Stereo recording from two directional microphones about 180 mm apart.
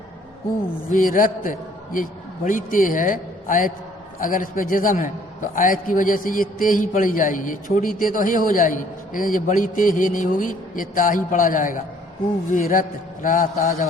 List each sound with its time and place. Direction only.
0.9 s a man's voice: 50° left (ahead or behind)